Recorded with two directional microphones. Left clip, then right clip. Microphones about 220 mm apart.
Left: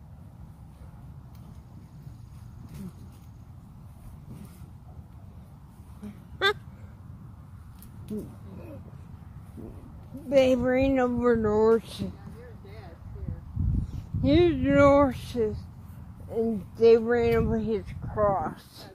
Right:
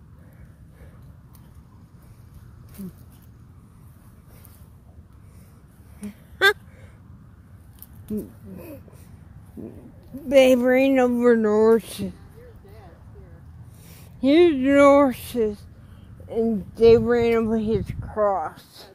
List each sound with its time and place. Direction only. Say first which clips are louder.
5.9 s a sound: right 8 dB; 55° right (ahead or behind)
10.2 s speech: right 6 dB; 55° right (ahead or behind)
14.2 s speech: right 6 dB; 50° right (ahead or behind)